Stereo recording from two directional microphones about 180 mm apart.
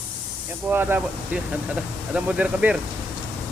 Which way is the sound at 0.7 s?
10° right (ahead or behind).